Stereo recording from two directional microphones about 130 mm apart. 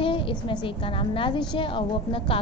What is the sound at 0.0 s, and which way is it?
A woman's voice, 40° left (ahead or behind).